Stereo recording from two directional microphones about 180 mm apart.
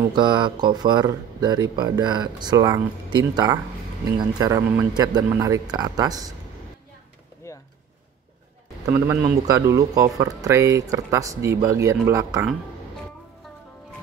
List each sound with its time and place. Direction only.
0.1 s speech: 25° right (ahead or behind)
7.4 s a sound: 15° left (ahead or behind)
9.5 s speech: 20° right (ahead or behind)